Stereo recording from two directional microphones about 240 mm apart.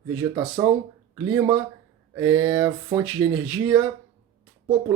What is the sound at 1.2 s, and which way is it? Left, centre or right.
Speech, centre.